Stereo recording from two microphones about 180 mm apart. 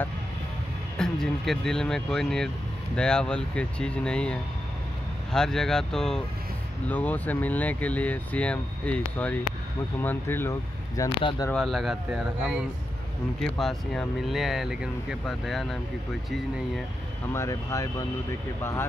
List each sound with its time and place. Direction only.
0.9 s speech: 5° left (ahead or behind)
11.0 s speech: 25° left (ahead or behind)
11.5 s speech: centre (ahead or behind)
17.3 s speech: 15° left (ahead or behind)